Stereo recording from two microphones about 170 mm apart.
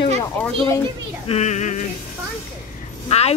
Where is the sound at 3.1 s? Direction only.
35° left (ahead or behind).